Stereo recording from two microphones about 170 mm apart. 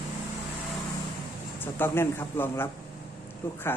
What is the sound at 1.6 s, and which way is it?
Speech, 10° left (ahead or behind).